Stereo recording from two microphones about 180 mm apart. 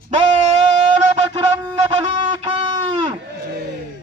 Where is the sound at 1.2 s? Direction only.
25° right (ahead or behind).